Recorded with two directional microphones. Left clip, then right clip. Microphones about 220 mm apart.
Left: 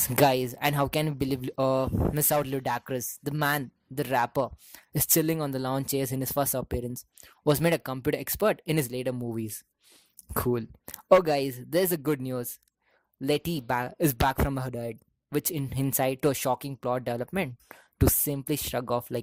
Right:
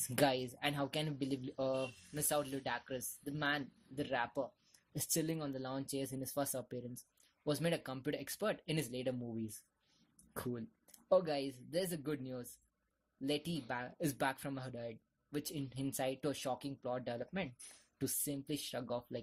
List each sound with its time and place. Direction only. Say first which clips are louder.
0.2 s speech: left 11 dB; 40° left (ahead or behind)